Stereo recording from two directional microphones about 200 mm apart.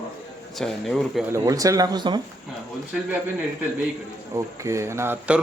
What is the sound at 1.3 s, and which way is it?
Speech, 15° right (ahead or behind).